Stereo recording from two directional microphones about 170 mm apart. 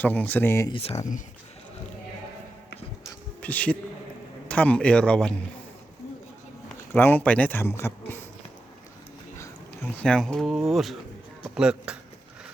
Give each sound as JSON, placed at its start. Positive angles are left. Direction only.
{"t": 0.0, "sound": "speech", "side_deg": 10}
{"t": 0.7, "sound": "speech", "side_deg": 35}
{"t": 3.4, "sound": "a man's voice", "side_deg": 10}
{"t": 6.9, "sound": "speech", "side_deg": 10}
{"t": 10.0, "sound": "speech", "side_deg": 5}